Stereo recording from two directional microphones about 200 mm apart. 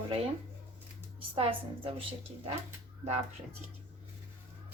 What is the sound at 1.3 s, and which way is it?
Speech, 25° right (ahead or behind).